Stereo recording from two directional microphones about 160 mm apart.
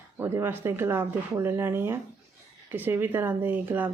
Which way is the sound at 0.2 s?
15° right (ahead or behind).